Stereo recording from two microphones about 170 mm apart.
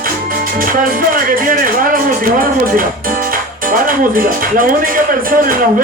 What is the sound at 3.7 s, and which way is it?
Speech, 55° right (ahead or behind).